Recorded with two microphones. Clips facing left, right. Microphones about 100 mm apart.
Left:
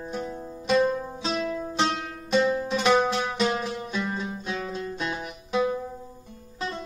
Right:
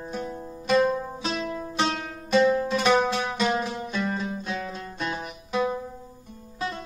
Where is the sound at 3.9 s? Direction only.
15° left (ahead or behind).